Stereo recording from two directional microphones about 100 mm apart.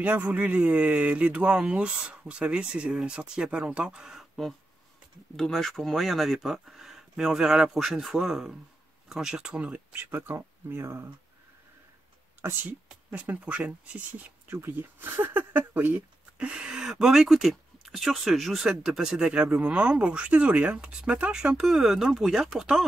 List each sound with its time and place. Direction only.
0.0 s speech: 15° right (ahead or behind)
12.4 s speech: 20° right (ahead or behind)